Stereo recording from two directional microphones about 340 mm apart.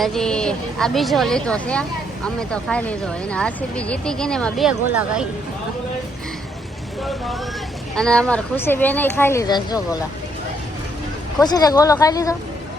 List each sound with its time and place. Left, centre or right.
0.0 s speech: centre
7.9 s speech: centre
11.3 s speech: centre